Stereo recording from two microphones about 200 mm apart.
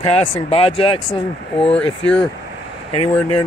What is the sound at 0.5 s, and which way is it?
Speech, 25° left (ahead or behind).